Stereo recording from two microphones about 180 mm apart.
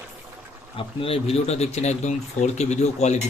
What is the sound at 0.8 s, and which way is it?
Speech, 30° left (ahead or behind).